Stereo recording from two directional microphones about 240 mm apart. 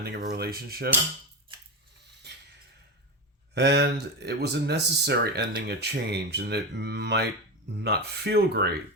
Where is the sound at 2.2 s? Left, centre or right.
Right.